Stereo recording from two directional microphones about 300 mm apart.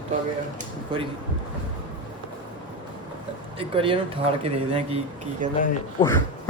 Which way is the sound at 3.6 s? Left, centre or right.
Centre.